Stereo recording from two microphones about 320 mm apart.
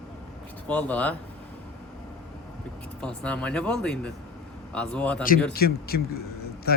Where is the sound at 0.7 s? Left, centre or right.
Centre.